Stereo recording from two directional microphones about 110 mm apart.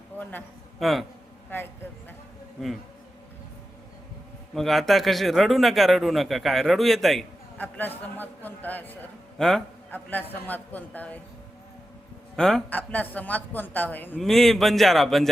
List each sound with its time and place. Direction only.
0.2 s a man's voice: 15° left (ahead or behind)
0.8 s a man's voice: centre (ahead or behind)
1.5 s speech: 20° left (ahead or behind)
2.6 s a man's voice: centre (ahead or behind)
4.5 s a man's voice: centre (ahead or behind)
7.6 s a man's voice: 15° left (ahead or behind)
9.4 s a man's voice: 5° left (ahead or behind)
9.9 s a man's voice: 15° left (ahead or behind)
12.4 s a man's voice: 5° left (ahead or behind)
14.2 s a man's voice: centre (ahead or behind)